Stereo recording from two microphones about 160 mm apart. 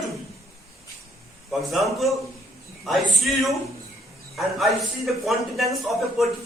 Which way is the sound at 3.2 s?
Centre (ahead or behind).